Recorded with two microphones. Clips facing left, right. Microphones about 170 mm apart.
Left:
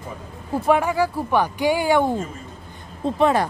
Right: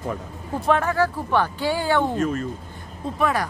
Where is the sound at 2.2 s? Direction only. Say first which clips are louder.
Right 8 dB; 75° right (ahead or behind).